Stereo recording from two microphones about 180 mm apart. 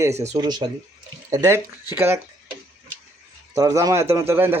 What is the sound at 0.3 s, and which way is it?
A man's voice, 25° right (ahead or behind).